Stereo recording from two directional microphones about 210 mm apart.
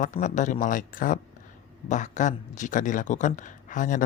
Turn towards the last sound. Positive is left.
turn(degrees=40)  # may be behind; listen again after turning